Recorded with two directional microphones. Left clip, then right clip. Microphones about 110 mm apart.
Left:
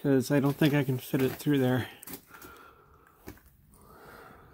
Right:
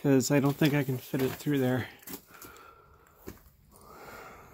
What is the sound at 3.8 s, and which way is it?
Snort, 40° right (ahead or behind).